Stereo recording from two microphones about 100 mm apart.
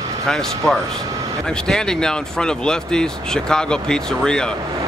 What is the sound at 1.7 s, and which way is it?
Speech, 5° left (ahead or behind).